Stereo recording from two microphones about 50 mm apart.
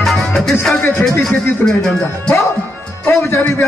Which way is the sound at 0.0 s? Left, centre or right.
Centre.